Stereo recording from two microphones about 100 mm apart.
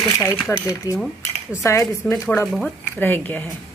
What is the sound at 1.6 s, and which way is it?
Speech, 30° left (ahead or behind).